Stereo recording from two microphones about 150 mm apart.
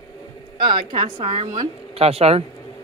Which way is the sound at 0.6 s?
30° right (ahead or behind).